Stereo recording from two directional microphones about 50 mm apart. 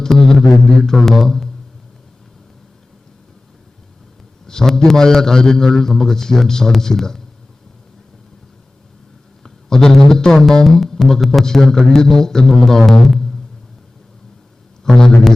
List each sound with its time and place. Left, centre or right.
0.0 s music: centre
4.4 s speech: centre
9.4 s speech: centre
14.8 s a sound: centre